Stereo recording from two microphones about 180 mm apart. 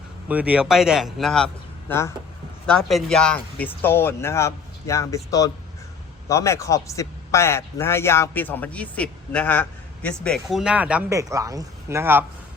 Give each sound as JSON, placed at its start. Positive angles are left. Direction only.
{"t": 0.3, "sound": "speech", "side_deg": -10}
{"t": 1.9, "sound": "a man's voice", "side_deg": 15}
{"t": 2.6, "sound": "a man's voice", "side_deg": 5}
{"t": 11.1, "sound": "speech", "side_deg": -15}